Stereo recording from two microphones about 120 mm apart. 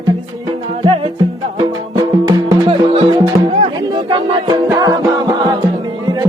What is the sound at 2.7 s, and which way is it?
Music, 55° right (ahead or behind).